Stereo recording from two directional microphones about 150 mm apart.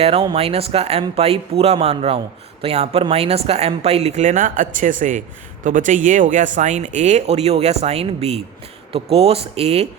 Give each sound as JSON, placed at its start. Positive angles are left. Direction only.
{"t": 0.0, "sound": "speech", "side_deg": -40}